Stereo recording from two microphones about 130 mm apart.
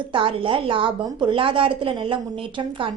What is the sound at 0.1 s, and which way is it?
A woman's voice, 40° right (ahead or behind).